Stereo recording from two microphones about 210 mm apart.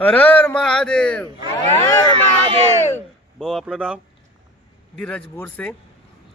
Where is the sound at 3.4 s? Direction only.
Centre (ahead or behind).